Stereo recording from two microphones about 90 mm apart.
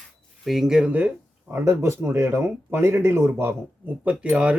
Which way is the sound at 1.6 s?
30° right (ahead or behind).